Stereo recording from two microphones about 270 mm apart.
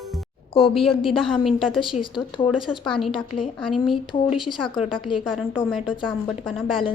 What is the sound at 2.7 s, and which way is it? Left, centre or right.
Speech, centre.